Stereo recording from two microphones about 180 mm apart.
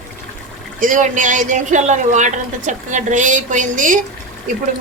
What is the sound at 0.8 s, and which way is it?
Speech, 45° right (ahead or behind).